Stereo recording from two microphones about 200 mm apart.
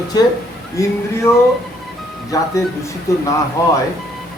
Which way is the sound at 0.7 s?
15° left (ahead or behind).